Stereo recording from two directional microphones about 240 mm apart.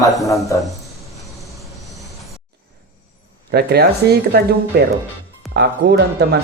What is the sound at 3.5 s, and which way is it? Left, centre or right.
Speech, right.